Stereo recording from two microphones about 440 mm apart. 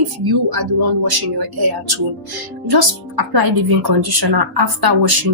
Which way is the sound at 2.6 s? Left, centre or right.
Right.